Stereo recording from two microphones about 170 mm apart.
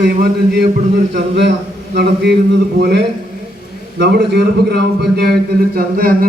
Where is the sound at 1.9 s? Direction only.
80° right.